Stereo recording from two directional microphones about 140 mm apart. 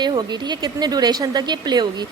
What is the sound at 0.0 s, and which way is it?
A woman's voice, 30° right (ahead or behind).